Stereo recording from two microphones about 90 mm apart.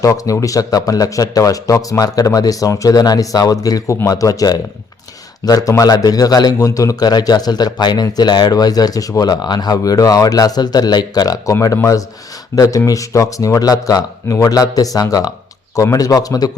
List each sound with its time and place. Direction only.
0.0 s speech: 40° left (ahead or behind)
12.5 s speech: 40° left (ahead or behind)